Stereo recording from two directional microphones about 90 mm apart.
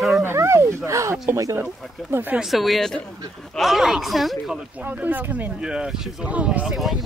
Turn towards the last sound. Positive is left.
turn(degrees=-5)  # may be behind; listen again after turning